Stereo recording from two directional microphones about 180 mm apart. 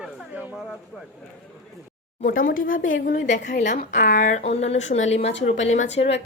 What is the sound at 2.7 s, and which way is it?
Speech, 90° left.